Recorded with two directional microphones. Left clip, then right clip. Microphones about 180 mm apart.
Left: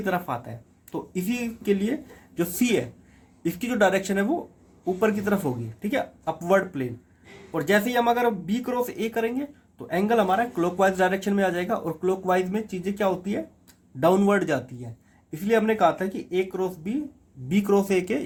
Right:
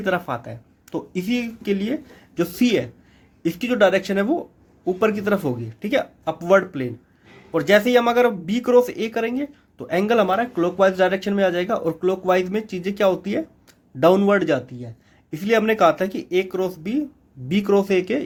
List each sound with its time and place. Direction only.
0.0 s speech: 45° right (ahead or behind)
15.3 s speech: 50° right (ahead or behind); by 18.2 s 25° right (ahead or behind)